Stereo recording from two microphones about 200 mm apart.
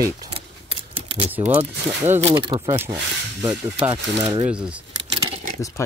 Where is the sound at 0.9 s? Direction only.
30° right (ahead or behind).